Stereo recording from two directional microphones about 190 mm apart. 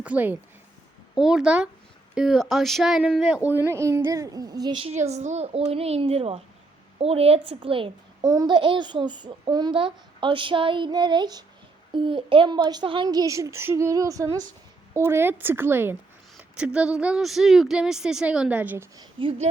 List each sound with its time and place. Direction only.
0.0 s a child's voice: 10° right (ahead or behind)
18.9 s a child's voice: 25° right (ahead or behind)